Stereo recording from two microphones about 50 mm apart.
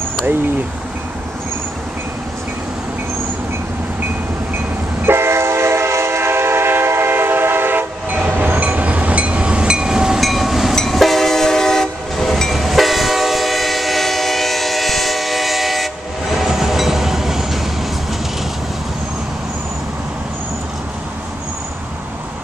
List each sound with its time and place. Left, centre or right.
5.0 s train: right; by 10.2 s centre
10.2 s train: centre